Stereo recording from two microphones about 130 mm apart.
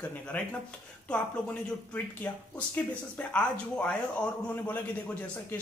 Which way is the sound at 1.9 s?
15° left (ahead or behind).